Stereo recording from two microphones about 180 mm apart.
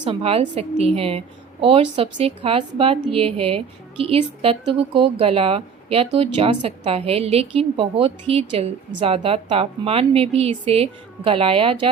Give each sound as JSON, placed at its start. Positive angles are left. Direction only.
{"t": 0.0, "sound": "a woman's voice", "side_deg": -30}